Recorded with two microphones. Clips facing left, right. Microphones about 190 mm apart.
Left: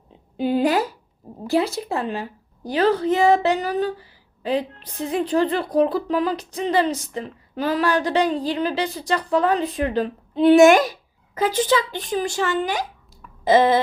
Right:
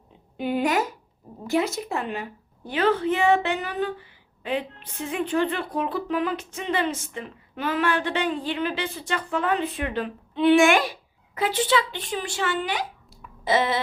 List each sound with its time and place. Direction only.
0.3 s speech: 30° left (ahead or behind)